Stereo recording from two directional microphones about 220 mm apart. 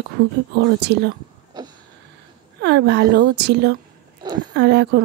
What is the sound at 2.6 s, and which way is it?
Speech, 50° right (ahead or behind).